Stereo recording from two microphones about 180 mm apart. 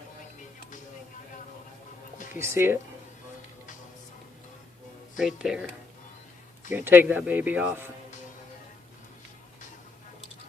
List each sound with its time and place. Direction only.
2.1 s music: 45° left (ahead or behind)
2.4 s speech: 15° right (ahead or behind)
5.1 s speech: centre (ahead or behind)